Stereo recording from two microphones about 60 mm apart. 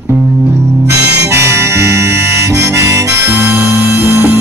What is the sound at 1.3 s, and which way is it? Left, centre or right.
Harmonica, right.